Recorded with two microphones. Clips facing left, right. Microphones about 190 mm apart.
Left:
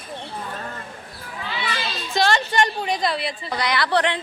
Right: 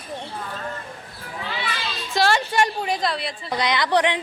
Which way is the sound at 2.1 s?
5° right (ahead or behind).